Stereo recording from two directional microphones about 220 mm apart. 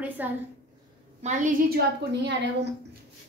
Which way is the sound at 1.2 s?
35° right (ahead or behind).